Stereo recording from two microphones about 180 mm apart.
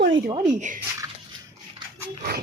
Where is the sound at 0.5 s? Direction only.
45° right (ahead or behind).